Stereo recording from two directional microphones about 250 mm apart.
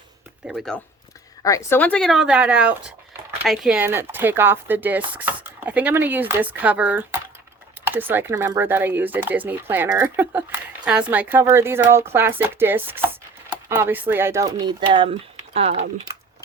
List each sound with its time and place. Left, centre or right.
0.4 s speech: centre
1.4 s speech: centre
13.5 s a sound: centre
14.1 s speech: centre